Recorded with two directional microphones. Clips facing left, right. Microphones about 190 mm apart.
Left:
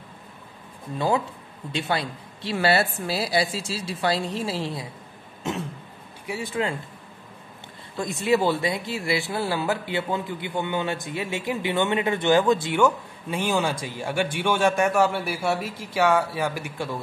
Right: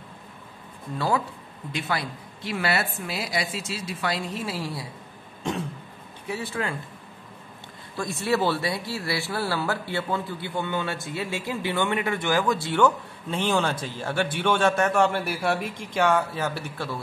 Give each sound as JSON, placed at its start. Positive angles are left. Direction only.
{"t": 0.9, "sound": "a woman's voice", "side_deg": 20}
{"t": 6.2, "sound": "speech", "side_deg": 15}
{"t": 8.0, "sound": "speech", "side_deg": 15}